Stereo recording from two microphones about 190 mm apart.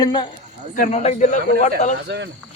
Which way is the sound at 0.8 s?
35° left (ahead or behind).